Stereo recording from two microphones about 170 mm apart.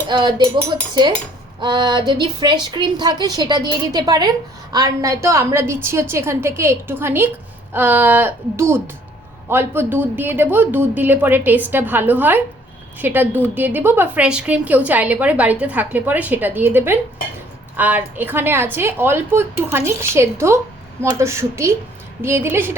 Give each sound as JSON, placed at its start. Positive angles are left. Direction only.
{"t": 0.1, "sound": "a woman's voice", "side_deg": -25}
{"t": 1.6, "sound": "a woman's voice", "side_deg": -25}